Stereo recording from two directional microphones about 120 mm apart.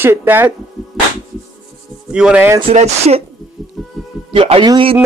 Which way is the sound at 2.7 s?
60° right (ahead or behind).